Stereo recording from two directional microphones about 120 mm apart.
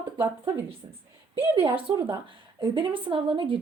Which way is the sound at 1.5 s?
45° right (ahead or behind).